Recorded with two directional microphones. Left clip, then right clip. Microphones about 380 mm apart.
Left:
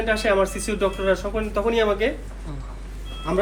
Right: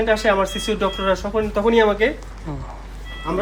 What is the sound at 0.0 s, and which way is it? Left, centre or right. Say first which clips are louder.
Speech: right 3 dB; right.